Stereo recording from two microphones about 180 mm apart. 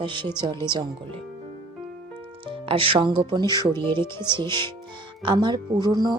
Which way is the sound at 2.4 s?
30° right (ahead or behind).